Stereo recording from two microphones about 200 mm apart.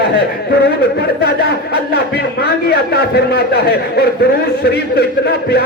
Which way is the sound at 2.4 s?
50° left (ahead or behind).